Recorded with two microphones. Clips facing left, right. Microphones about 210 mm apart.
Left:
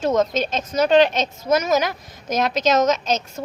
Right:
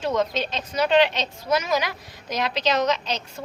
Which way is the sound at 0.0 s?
45° left (ahead or behind).